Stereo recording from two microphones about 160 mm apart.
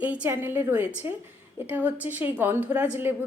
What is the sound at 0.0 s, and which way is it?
Speech, 10° right (ahead or behind).